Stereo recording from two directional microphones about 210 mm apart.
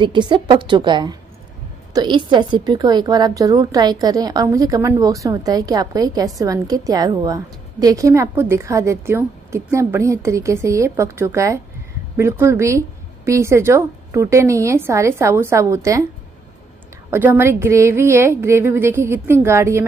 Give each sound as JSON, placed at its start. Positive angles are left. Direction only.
{"t": 0.0, "sound": "a woman's voice", "side_deg": -20}
{"t": 17.1, "sound": "a woman's voice", "side_deg": -10}